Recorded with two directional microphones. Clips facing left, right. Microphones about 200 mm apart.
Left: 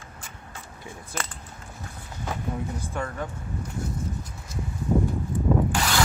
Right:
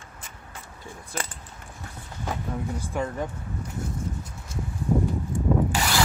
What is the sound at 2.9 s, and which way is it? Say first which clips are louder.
Speech: right 3 dB; 20° right (ahead or behind).